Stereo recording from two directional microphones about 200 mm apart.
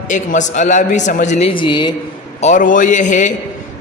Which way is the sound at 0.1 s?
40° left (ahead or behind).